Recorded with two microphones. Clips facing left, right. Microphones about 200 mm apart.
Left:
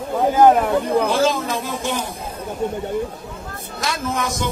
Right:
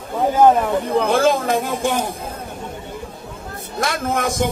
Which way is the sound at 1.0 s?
55° right (ahead or behind).